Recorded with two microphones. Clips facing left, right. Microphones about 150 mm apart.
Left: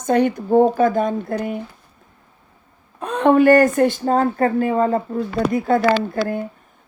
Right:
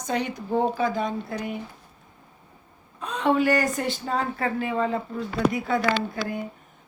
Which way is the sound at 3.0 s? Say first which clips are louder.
Left 8 dB; 55° left (ahead or behind).